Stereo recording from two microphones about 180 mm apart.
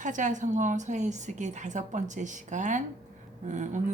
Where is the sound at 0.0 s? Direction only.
45° right (ahead or behind).